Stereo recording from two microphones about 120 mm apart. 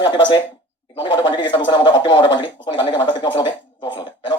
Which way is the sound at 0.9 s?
40° left (ahead or behind).